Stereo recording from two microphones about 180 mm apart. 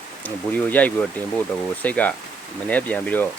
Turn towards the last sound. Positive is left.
turn(degrees=10)  # may be behind; listen again after turning